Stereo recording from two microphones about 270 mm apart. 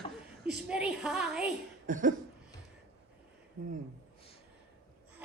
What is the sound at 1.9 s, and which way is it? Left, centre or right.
Cough, right.